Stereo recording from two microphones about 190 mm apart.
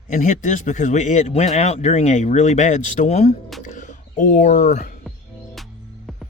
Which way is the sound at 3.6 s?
40° left (ahead or behind).